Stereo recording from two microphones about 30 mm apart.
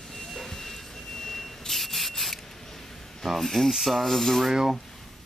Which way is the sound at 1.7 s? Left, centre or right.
Centre.